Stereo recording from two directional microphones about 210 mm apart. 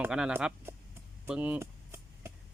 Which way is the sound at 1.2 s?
5° right (ahead or behind).